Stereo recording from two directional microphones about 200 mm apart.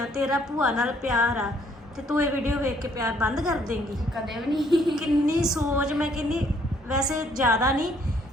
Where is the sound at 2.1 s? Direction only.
15° right (ahead or behind).